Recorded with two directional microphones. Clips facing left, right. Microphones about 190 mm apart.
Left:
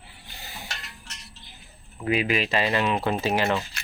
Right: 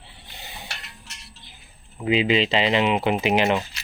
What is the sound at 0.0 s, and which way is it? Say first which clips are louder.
Stir: right 1 dB; 20° right (ahead or behind).